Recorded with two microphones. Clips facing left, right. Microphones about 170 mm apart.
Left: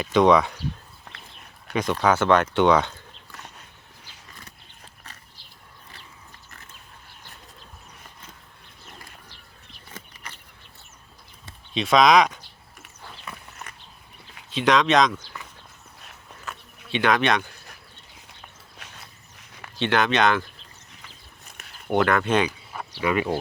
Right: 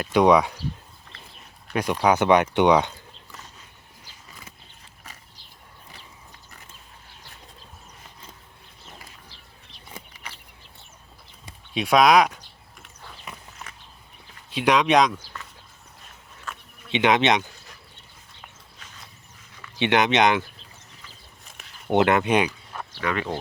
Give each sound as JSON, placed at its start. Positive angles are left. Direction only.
{"t": 0.0, "sound": "speech", "side_deg": -10}
{"t": 1.7, "sound": "speech", "side_deg": -10}
{"t": 11.4, "sound": "a sound", "side_deg": -10}
{"t": 14.5, "sound": "speech", "side_deg": -10}
{"t": 16.9, "sound": "speech", "side_deg": -20}
{"t": 18.8, "sound": "a sound", "side_deg": 65}
{"t": 19.8, "sound": "speech", "side_deg": -20}
{"t": 21.8, "sound": "speech", "side_deg": -20}
{"t": 22.4, "sound": "a sound", "side_deg": 5}
{"t": 23.0, "sound": "speech", "side_deg": 10}